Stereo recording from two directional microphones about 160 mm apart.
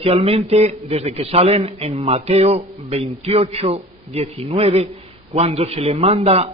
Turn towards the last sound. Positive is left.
turn(degrees=-40)  # may be behind; listen again after turning